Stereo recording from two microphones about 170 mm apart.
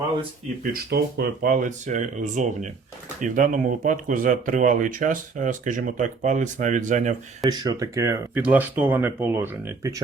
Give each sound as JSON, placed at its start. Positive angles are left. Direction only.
{"t": 0.6, "sound": "speech", "side_deg": -60}
{"t": 7.4, "sound": "speech", "side_deg": -25}